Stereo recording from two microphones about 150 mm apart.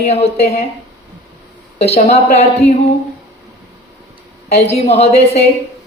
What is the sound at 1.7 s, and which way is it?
A woman's voice, 45° left (ahead or behind).